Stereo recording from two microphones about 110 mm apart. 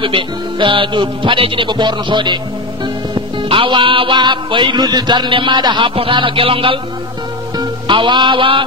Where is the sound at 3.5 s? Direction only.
50° right (ahead or behind).